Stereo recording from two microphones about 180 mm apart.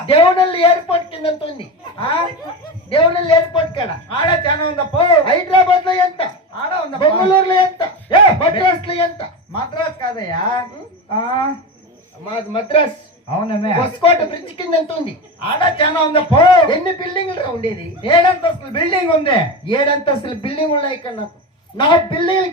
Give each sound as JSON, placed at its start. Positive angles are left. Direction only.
{"t": 0.0, "sound": "a woman's voice", "side_deg": 30}
{"t": 12.5, "sound": "a man's voice", "side_deg": 30}